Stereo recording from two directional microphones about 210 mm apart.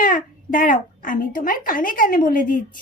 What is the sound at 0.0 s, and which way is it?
Speech, 40° left (ahead or behind).